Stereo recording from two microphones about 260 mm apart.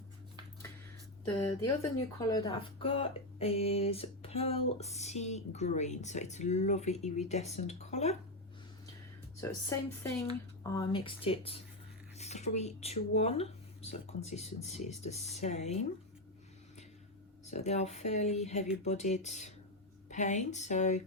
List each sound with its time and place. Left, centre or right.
1.3 s speech: centre
9.4 s speech: centre
17.4 s speech: left